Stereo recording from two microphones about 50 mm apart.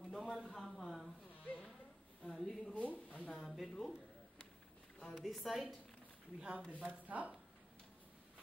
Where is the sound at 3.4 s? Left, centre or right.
Centre.